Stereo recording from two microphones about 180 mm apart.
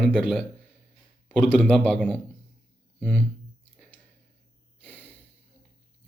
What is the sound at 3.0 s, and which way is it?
Speech, 10° left (ahead or behind).